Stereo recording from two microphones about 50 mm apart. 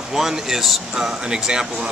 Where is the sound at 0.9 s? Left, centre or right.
Centre.